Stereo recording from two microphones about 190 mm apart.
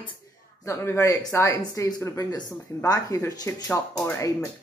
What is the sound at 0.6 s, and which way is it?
Speech, 15° left (ahead or behind).